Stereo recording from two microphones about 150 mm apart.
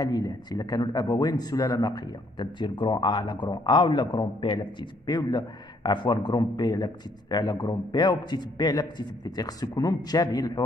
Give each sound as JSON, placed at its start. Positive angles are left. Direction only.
{"t": 0.0, "sound": "speech", "side_deg": 25}